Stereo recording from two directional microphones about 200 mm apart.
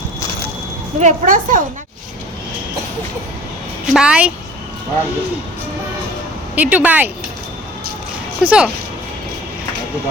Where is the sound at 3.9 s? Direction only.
5° right (ahead or behind).